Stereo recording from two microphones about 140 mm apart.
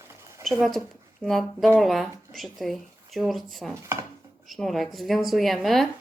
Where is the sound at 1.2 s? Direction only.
Centre (ahead or behind).